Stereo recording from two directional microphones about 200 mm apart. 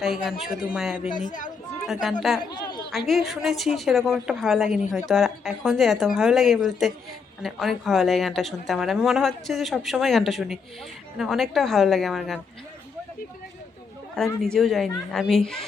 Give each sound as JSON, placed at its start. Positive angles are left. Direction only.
{"t": 0.0, "sound": "a woman's voice", "side_deg": 0}
{"t": 1.2, "sound": "speech", "side_deg": 40}
{"t": 1.9, "sound": "a woman's voice", "side_deg": 0}
{"t": 2.6, "sound": "chatter", "side_deg": 20}
{"t": 3.1, "sound": "a woman's voice", "side_deg": 0}
{"t": 14.4, "sound": "a woman's voice", "side_deg": 0}